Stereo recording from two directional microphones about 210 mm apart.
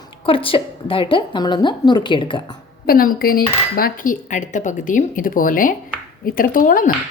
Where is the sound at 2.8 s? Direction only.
45° left (ahead or behind).